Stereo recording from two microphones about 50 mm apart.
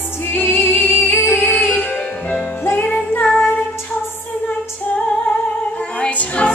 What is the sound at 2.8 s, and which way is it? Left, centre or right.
Music, left.